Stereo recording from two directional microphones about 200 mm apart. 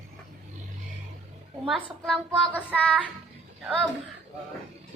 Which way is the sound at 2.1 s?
5° left (ahead or behind).